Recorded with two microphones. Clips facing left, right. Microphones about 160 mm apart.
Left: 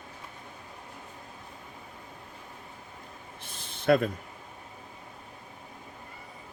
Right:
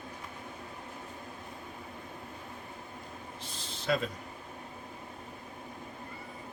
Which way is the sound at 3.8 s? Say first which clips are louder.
Left 8 dB; 55° left (ahead or behind).